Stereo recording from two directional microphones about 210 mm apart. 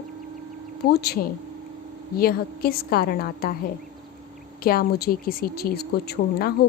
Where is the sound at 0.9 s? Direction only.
50° left (ahead or behind).